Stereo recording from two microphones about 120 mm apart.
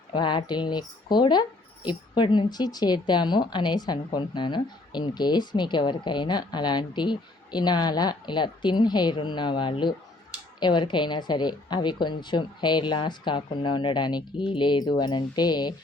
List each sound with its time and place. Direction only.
0.1 s speech: 40° left (ahead or behind)